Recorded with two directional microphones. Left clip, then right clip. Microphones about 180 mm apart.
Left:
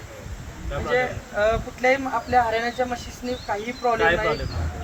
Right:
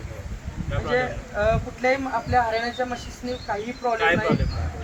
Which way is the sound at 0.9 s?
20° left (ahead or behind).